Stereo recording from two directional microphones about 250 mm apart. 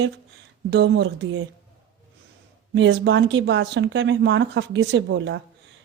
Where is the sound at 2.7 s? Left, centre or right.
Right.